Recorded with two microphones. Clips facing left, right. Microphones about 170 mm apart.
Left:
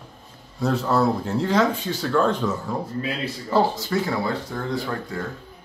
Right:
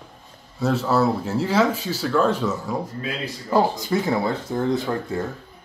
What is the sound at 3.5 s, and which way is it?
Speech, 20° right (ahead or behind).